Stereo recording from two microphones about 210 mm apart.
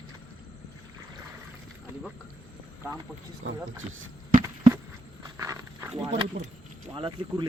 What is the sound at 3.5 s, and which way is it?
Speech, 70° right (ahead or behind).